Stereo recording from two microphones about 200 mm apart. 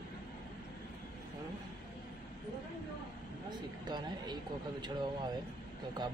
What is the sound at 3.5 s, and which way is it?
Speech, 20° right (ahead or behind).